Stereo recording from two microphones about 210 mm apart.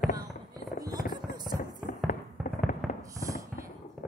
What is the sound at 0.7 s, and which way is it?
Fireworks, 20° right (ahead or behind).